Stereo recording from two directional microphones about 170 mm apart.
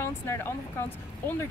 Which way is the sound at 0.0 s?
15° left (ahead or behind).